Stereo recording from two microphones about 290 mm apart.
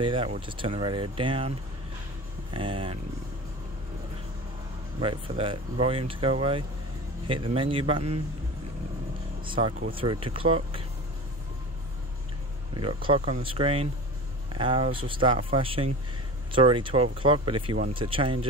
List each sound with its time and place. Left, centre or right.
0.0 s speech: centre
2.5 s speech: centre
5.0 s speech: centre
9.4 s speech: centre
12.7 s speech: centre